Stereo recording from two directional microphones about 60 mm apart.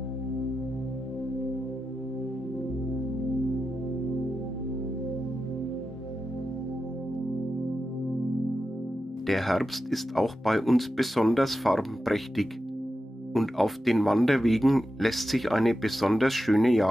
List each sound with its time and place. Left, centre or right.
9.2 s speech: centre